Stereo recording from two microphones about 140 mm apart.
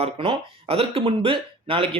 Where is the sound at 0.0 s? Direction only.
45° right (ahead or behind).